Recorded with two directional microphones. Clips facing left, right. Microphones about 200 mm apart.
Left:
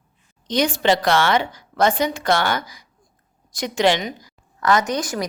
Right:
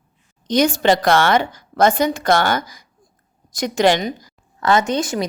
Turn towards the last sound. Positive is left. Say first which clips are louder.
# right 3 dB
turn(degrees=-25)  # may be behind; listen again after turning